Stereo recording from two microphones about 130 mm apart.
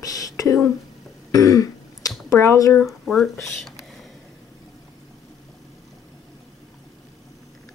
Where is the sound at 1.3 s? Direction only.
25° left (ahead or behind).